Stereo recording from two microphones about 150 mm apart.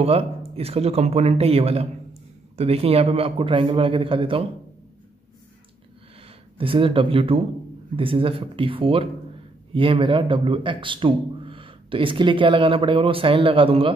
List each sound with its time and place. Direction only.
0.0 s a man's voice: 40° right (ahead or behind)
6.6 s a man's voice: 35° right (ahead or behind)